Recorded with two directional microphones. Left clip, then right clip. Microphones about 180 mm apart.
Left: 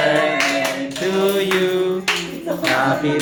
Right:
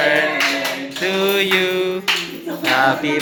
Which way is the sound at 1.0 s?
15° right (ahead or behind).